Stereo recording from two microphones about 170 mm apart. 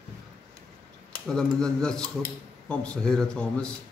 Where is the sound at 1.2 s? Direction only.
5° left (ahead or behind).